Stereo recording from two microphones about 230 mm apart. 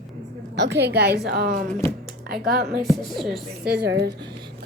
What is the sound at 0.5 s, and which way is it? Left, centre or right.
A woman's voice, right.